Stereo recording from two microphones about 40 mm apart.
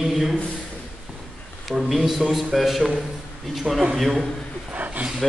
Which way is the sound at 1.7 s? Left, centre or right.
Centre.